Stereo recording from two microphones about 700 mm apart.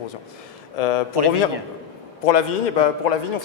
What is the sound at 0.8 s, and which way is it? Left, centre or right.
Speech, left.